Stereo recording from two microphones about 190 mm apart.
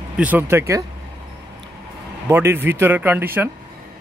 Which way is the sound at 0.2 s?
10° right (ahead or behind).